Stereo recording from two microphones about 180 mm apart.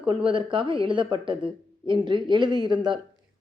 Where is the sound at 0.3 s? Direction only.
30° right (ahead or behind).